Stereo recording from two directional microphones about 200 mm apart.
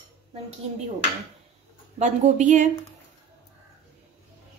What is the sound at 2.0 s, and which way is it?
Speech, 35° right (ahead or behind).